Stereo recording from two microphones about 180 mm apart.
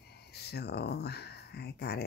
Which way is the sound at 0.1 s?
65° left (ahead or behind).